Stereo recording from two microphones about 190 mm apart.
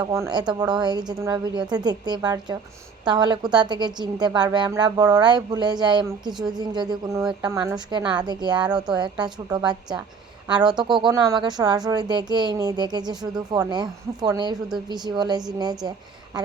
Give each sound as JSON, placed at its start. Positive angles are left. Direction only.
{"t": 0.0, "sound": "a woman's voice", "side_deg": -20}